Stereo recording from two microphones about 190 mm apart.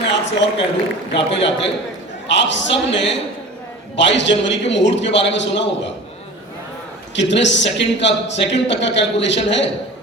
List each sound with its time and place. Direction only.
0.1 s a sound: 70° left (ahead or behind)
1.1 s a man's voice: 70° left (ahead or behind)
7.2 s a man's voice: 70° left (ahead or behind)